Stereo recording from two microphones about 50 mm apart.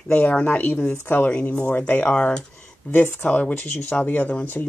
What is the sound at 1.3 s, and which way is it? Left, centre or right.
Speech, left.